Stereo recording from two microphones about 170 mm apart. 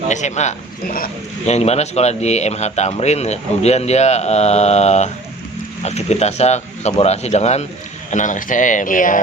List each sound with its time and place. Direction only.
0.1 s speech: 45° left (ahead or behind)
1.5 s speech: 40° left (ahead or behind)